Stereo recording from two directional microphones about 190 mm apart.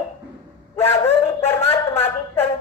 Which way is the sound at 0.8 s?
10° left (ahead or behind).